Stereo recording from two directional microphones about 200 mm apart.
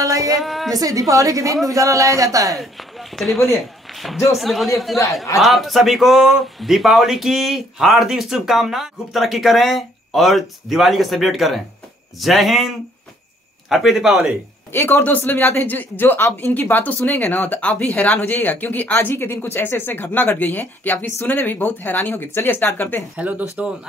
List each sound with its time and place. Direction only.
0.0 s a sound: 15° right (ahead or behind)
0.4 s speech: centre (ahead or behind)
0.7 s a woman's voice: 15° right (ahead or behind)
3.2 s a man's voice: centre (ahead or behind)
14.7 s speech: 10° left (ahead or behind)
23.1 s a woman's voice: 5° right (ahead or behind)